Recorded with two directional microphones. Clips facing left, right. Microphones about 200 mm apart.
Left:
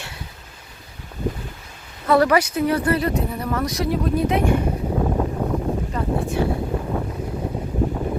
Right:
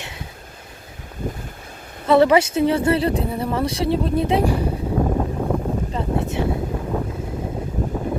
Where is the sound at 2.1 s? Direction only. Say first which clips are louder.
Right 3 dB; 25° right (ahead or behind).